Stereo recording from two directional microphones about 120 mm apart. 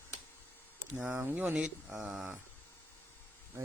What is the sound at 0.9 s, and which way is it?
Speech, 5° right (ahead or behind).